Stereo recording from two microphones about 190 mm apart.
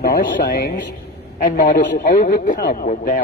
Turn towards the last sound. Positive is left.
turn(degrees=45)  # may be behind; listen again after turning